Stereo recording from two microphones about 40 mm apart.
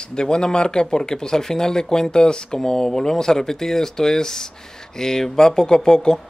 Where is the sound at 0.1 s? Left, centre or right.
Left.